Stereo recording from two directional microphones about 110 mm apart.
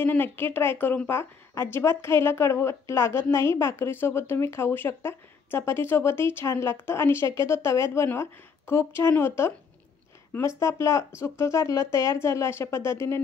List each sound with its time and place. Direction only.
0.0 s a woman's voice: 20° left (ahead or behind)
10.6 s a woman's voice: 25° left (ahead or behind)